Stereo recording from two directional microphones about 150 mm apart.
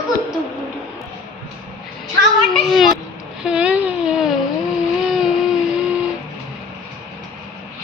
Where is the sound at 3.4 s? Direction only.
5° right (ahead or behind).